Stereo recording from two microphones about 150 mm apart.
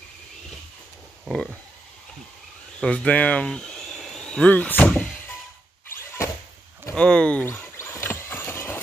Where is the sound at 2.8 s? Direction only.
5° left (ahead or behind).